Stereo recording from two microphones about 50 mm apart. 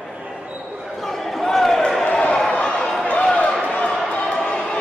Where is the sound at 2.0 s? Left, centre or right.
Centre.